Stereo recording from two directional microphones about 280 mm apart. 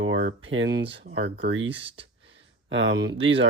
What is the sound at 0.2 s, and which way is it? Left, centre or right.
Speech, right.